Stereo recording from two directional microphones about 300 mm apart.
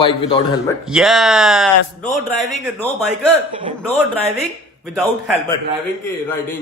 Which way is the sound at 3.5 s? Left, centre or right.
Centre.